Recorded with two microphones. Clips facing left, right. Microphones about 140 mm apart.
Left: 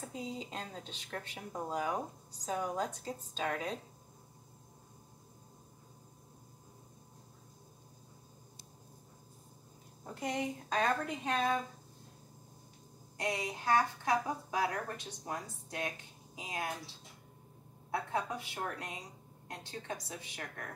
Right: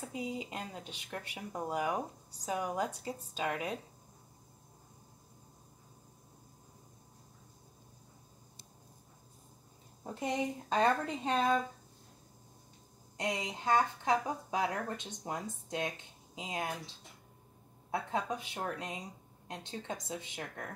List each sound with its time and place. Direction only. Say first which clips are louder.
0.1 s speech: right 4 dB; 10° right (ahead or behind)
10.7 s speech: right 3 dB; 30° right (ahead or behind)
13.2 s speech: even; 20° right (ahead or behind)
17.9 s speech: right 1 dB; 20° right (ahead or behind)